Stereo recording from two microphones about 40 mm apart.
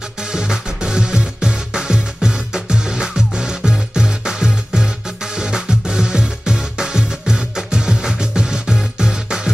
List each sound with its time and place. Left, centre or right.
0.2 s music: centre